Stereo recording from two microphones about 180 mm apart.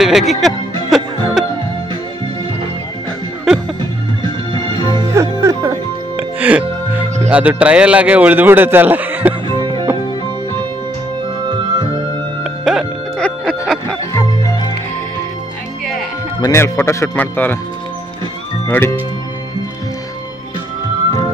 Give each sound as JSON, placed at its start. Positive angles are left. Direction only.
{"t": 0.0, "sound": "speech", "side_deg": 0}
{"t": 0.8, "sound": "music", "side_deg": 0}
{"t": 3.5, "sound": "music", "side_deg": -5}
{"t": 4.6, "sound": "music", "side_deg": -25}
{"t": 5.1, "sound": "music", "side_deg": -15}
{"t": 7.2, "sound": "a man's voice", "side_deg": -10}
{"t": 9.5, "sound": "music", "side_deg": -25}
{"t": 12.6, "sound": "music", "side_deg": 0}
{"t": 14.4, "sound": "music", "side_deg": 20}
{"t": 16.3, "sound": "speech", "side_deg": 20}